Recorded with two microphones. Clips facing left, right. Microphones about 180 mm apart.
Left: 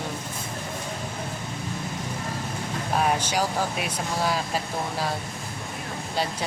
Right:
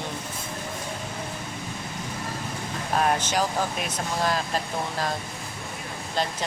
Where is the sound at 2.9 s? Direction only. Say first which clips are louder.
Right 1 dB; 10° left (ahead or behind).